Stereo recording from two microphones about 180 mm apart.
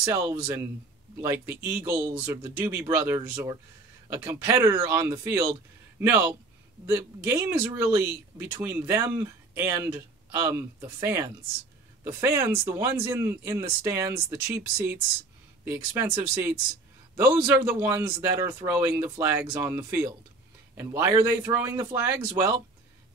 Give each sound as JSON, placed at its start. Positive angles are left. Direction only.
{"t": 0.0, "sound": "speech", "side_deg": -15}
{"t": 17.6, "sound": "speech", "side_deg": -10}